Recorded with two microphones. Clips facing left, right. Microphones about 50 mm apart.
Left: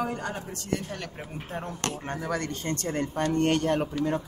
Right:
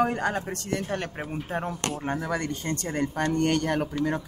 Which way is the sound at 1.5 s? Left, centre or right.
Centre.